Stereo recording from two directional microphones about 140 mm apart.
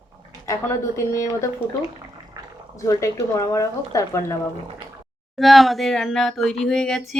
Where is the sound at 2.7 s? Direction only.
20° left (ahead or behind).